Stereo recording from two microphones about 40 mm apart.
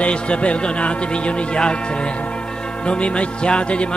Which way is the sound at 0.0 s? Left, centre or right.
Left.